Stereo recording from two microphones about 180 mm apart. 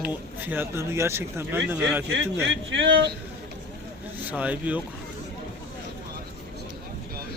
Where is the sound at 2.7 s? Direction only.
80° right.